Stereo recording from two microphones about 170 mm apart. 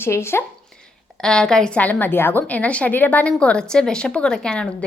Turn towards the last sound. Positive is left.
turn(degrees=5)  # may be behind; listen again after turning